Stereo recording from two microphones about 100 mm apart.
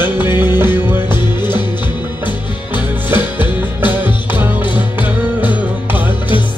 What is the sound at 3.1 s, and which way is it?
Music, 20° right (ahead or behind).